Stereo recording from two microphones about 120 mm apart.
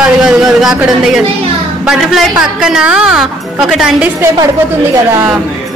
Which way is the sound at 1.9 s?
5° right (ahead or behind).